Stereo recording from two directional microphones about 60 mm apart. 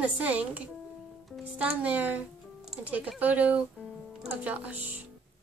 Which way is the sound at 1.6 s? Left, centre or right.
Right.